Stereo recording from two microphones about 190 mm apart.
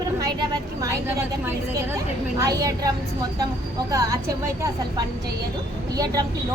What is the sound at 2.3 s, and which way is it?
Speech, 20° right (ahead or behind).